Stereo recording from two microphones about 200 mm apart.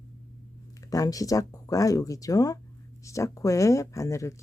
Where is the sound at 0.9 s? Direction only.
15° left (ahead or behind).